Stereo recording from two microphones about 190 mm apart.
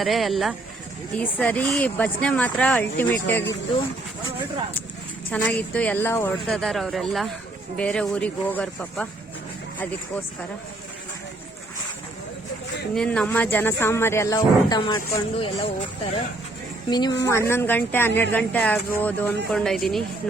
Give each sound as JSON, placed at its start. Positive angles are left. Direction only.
{"t": 0.0, "sound": "speech", "side_deg": 0}
{"t": 5.3, "sound": "speech", "side_deg": 5}
{"t": 12.9, "sound": "speech", "side_deg": 5}
{"t": 16.9, "sound": "a woman's voice", "side_deg": 20}